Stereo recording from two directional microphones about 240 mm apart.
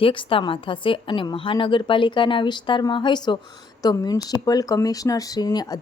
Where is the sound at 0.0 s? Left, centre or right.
Left.